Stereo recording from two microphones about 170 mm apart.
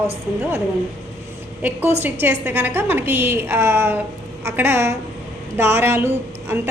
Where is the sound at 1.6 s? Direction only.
10° right (ahead or behind).